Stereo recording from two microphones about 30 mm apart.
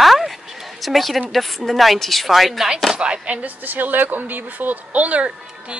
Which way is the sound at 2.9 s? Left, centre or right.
Right.